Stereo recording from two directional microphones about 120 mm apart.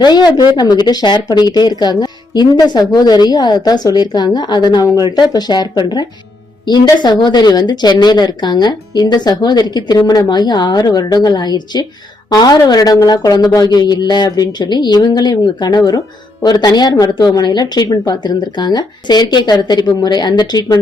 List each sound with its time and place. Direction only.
0.0 s speech: 35° left (ahead or behind)